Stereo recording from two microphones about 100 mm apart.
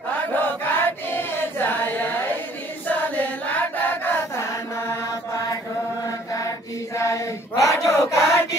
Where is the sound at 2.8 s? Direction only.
15° left (ahead or behind).